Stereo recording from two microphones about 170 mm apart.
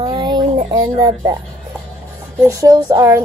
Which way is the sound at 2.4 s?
20° right (ahead or behind).